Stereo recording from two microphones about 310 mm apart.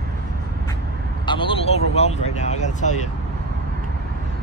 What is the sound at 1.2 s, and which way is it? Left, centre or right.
Speech, centre.